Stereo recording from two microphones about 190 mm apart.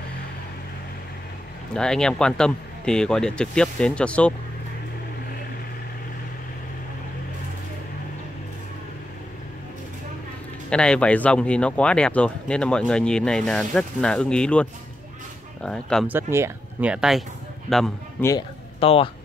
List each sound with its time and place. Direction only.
1.8 s speech: 5° left (ahead or behind)
10.7 s speech: 5° left (ahead or behind)
16.1 s speech: 15° right (ahead or behind); by 18.3 s 10° left (ahead or behind)
18.8 s speech: 30° left (ahead or behind)